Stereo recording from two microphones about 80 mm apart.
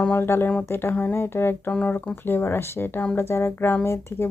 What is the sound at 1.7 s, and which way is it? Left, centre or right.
Speech, centre.